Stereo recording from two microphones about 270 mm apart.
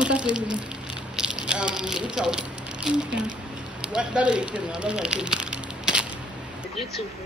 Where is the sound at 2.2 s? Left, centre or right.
Centre.